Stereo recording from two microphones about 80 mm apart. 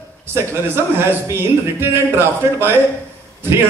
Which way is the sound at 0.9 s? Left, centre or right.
Right.